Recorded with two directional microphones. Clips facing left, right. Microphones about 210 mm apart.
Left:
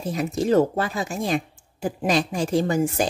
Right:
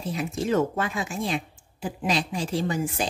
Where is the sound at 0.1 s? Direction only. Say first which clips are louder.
Left 5 dB; 40° left (ahead or behind).